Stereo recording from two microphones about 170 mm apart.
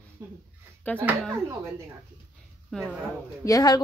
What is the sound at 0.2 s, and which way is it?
Speech, 20° right (ahead or behind).